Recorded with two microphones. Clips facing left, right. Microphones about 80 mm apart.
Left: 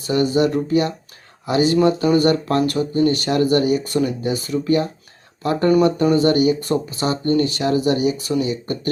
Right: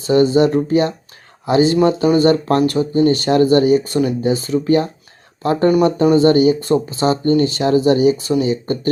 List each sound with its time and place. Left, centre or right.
0.1 s speech: right